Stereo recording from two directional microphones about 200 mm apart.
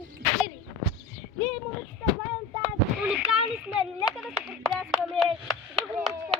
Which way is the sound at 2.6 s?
5° right (ahead or behind).